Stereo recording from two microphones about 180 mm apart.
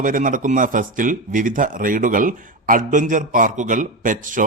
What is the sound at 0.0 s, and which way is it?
Speech, 45° right (ahead or behind).